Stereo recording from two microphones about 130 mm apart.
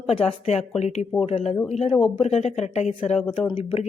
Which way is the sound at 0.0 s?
50° left (ahead or behind).